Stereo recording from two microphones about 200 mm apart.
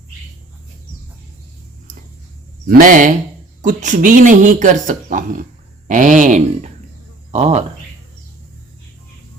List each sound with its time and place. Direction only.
2.6 s speech: 45° right (ahead or behind)